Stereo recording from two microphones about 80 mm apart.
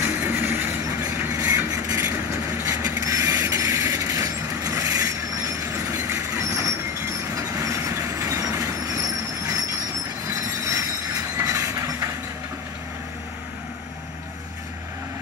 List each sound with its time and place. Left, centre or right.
0.0 s train: right
1.3 s vehicle: right
2.0 s train: right
5.7 s train: right
7.7 s train: right
10.2 s train: right